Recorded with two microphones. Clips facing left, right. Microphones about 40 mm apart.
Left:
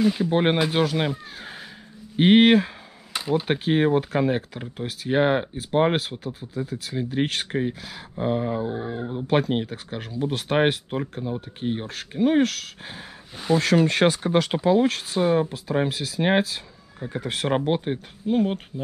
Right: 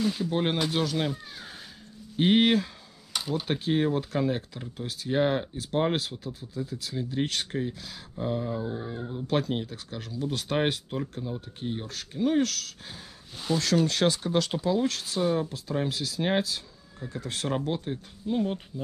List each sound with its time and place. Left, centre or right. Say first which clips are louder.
0.0 s speech: left 6 dB; centre
0.3 s speech: left 6 dB; left
3.1 s speech: left 6 dB; centre
17.2 s speech: left 6 dB; centre
17.5 s speech: left 7 dB; left